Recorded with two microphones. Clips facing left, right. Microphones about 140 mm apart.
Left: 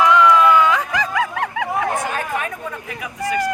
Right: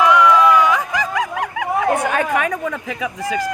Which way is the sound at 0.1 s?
15° right (ahead or behind).